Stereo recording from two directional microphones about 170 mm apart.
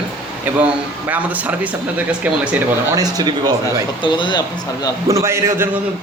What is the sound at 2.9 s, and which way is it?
Speech, 20° right (ahead or behind).